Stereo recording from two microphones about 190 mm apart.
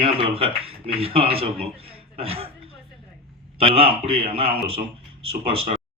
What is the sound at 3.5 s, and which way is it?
Speech, 30° right (ahead or behind).